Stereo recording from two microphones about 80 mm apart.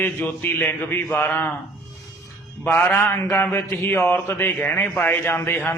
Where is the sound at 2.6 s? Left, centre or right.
Left.